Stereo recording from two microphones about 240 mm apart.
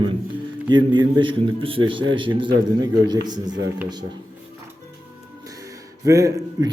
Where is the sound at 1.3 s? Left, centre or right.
Right.